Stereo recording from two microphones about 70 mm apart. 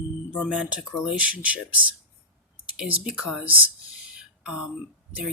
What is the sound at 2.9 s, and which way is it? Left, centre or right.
Speech, centre.